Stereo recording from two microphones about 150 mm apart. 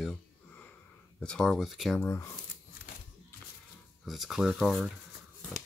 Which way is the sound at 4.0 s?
Centre (ahead or behind).